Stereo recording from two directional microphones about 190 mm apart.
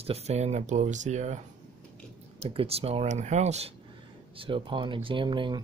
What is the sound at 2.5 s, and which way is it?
Speech, 30° right (ahead or behind).